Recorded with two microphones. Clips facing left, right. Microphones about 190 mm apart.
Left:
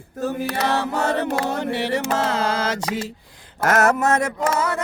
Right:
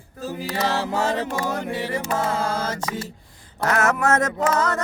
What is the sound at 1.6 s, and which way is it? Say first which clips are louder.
Music: left 4 dB; 70° left (ahead or behind).